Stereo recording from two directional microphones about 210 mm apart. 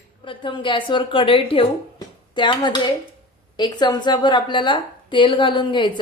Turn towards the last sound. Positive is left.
turn(degrees=20)  # may be behind; listen again after turning